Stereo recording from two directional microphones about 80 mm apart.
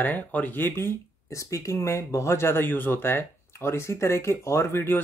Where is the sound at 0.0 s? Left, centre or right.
Centre.